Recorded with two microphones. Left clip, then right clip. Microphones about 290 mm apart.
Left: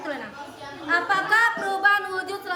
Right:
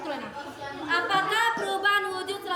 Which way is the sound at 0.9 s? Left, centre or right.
Centre.